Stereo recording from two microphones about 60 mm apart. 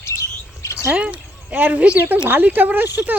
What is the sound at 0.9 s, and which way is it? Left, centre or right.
Speech, right.